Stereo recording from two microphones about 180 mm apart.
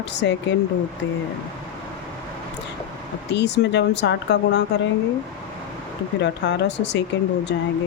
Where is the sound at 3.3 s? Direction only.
75° left (ahead or behind).